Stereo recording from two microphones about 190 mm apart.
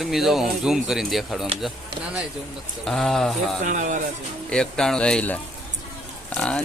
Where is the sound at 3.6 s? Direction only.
40° right (ahead or behind).